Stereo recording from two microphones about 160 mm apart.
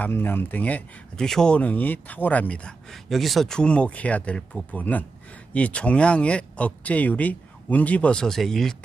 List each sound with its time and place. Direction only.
0.0 s speech: 10° left (ahead or behind)